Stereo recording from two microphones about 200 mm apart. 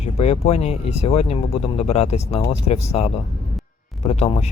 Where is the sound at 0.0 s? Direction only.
30° left (ahead or behind).